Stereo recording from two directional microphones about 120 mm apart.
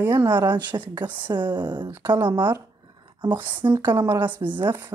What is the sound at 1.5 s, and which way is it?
Speech, 40° right (ahead or behind).